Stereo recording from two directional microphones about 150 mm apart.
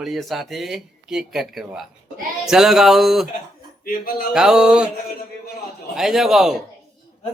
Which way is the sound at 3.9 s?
80° left.